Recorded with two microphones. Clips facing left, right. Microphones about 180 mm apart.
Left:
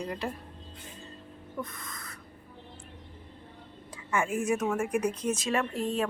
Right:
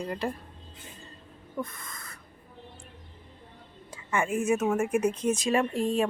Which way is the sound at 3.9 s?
Centre (ahead or behind).